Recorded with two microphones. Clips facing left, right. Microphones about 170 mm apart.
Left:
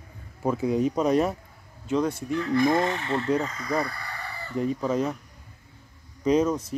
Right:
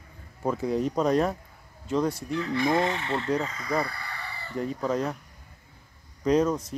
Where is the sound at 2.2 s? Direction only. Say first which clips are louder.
Left 4 dB; 45° left (ahead or behind).